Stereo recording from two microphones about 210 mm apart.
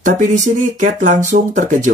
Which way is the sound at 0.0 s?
35° right (ahead or behind).